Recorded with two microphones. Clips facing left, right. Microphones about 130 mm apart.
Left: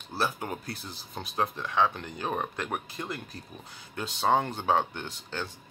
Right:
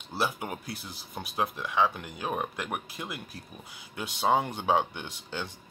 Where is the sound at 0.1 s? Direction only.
10° right (ahead or behind).